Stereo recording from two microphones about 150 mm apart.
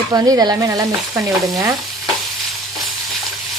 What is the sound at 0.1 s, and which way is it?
Speech, 25° right (ahead or behind).